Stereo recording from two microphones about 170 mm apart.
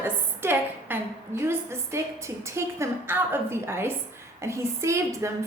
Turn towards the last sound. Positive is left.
turn(degrees=-15)  # may be behind; listen again after turning